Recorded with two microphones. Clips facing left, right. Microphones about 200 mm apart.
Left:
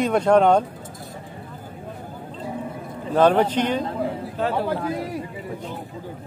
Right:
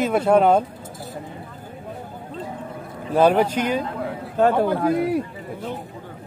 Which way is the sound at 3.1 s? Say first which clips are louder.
Even; 10° right (ahead or behind).